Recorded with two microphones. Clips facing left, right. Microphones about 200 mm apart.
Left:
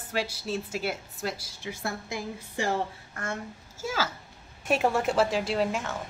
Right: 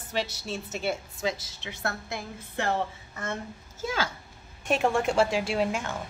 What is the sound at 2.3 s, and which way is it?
Speech, 60° right (ahead or behind).